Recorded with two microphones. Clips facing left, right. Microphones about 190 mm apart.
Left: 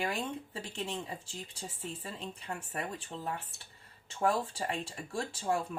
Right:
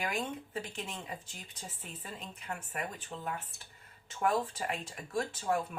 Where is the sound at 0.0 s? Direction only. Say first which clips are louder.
Left 1 dB; 30° left (ahead or behind).